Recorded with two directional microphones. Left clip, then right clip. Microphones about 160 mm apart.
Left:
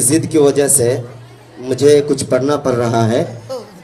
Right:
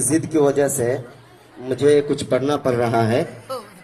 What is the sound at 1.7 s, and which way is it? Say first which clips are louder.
Music: left 5 dB; 25° right (ahead or behind).